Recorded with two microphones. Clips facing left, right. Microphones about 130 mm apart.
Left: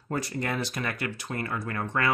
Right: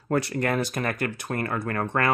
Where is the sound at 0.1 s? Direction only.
65° right (ahead or behind).